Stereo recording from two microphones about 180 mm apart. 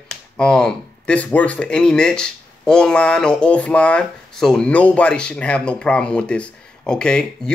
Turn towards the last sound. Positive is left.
turn(degrees=5)  # may be behind; listen again after turning